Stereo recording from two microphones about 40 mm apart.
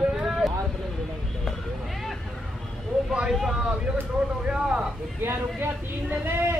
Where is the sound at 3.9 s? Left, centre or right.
Centre.